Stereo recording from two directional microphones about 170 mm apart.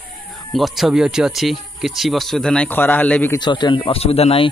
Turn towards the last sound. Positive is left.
turn(degrees=35)  # may be behind; listen again after turning